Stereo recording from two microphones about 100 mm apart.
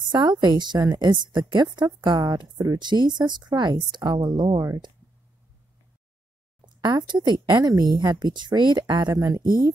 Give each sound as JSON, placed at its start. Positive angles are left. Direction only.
{"t": 0.1, "sound": "a woman's voice", "side_deg": -45}
{"t": 6.6, "sound": "a woman's voice", "side_deg": -45}
{"t": 9.4, "sound": "a woman's voice", "side_deg": -50}